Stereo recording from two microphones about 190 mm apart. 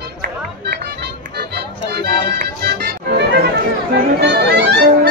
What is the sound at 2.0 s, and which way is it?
Music, 60° right (ahead or behind).